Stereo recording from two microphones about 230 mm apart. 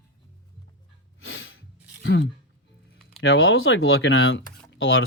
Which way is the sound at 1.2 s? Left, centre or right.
Left.